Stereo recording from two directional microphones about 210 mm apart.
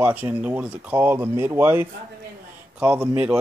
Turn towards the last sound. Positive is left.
turn(degrees=-5)  # may be behind; listen again after turning